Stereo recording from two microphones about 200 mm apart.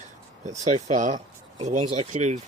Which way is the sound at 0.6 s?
40° right (ahead or behind).